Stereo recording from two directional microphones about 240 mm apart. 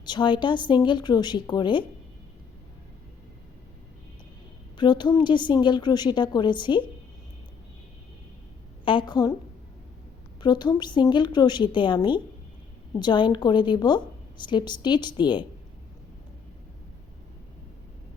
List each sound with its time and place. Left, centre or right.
0.0 s a woman's voice: centre
4.8 s a woman's voice: centre
8.8 s a woman's voice: left
10.4 s a woman's voice: centre